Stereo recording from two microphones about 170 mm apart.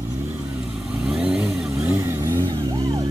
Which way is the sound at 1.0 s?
5° right (ahead or behind).